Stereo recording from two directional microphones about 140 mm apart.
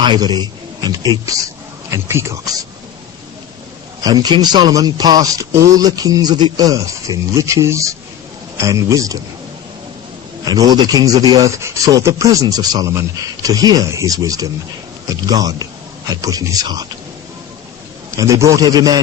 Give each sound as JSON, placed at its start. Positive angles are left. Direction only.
{"t": 0.0, "sound": "a man's voice", "side_deg": -35}
{"t": 4.0, "sound": "speech", "side_deg": -30}
{"t": 10.4, "sound": "speech", "side_deg": -25}
{"t": 18.2, "sound": "speech", "side_deg": -25}